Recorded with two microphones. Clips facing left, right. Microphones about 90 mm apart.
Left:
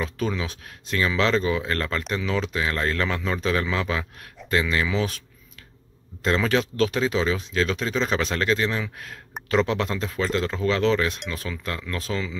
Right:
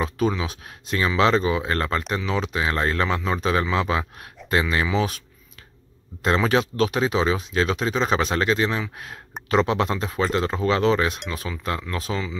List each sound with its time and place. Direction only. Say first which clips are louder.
0.0 s speech: right 4 dB; 15° right (ahead or behind)
6.2 s speech: right 2 dB; 20° right (ahead or behind)